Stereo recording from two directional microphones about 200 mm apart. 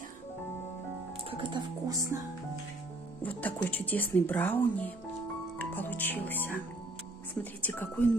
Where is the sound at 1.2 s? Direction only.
25° right (ahead or behind).